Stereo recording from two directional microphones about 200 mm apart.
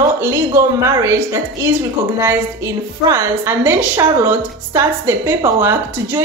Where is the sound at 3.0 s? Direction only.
15° right (ahead or behind).